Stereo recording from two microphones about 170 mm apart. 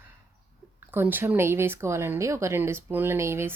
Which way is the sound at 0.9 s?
10° right (ahead or behind).